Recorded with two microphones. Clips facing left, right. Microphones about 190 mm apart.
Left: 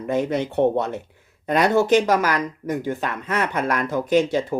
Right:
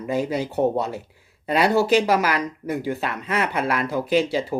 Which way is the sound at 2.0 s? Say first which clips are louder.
Left 1 dB; 10° right (ahead or behind).